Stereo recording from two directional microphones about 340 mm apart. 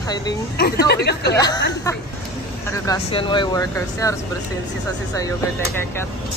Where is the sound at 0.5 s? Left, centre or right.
Left.